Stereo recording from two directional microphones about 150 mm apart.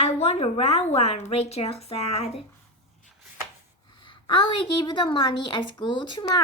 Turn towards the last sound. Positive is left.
turn(degrees=30)  # may be behind; listen again after turning